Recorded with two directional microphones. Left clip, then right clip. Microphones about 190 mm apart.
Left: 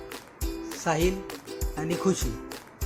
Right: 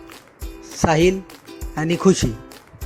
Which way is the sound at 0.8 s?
40° right (ahead or behind).